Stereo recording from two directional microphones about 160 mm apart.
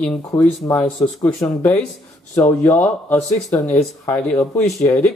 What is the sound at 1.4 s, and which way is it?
Speech, 10° left (ahead or behind).